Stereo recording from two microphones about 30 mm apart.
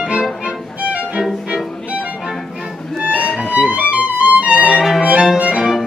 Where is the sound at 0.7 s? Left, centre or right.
Right.